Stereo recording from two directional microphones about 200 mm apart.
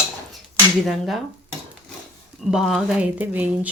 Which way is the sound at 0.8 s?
Centre (ahead or behind).